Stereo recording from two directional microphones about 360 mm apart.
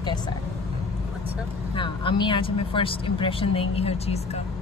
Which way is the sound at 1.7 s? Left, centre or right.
Centre.